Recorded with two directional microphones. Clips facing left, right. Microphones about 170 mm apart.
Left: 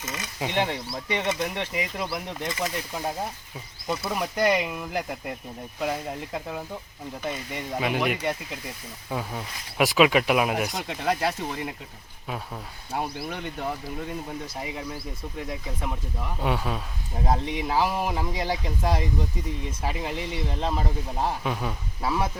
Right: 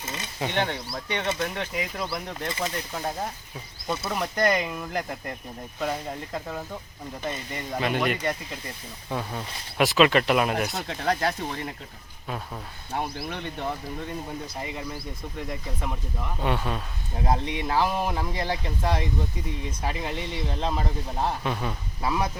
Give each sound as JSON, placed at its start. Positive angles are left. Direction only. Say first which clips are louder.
{"t": 0.0, "sound": "speech", "louder": "left 1 dB", "side_deg": -30}
{"t": 0.3, "sound": "speech", "louder": "left 1 dB", "side_deg": 5}
{"t": 12.9, "sound": "speech", "louder": "even", "side_deg": 5}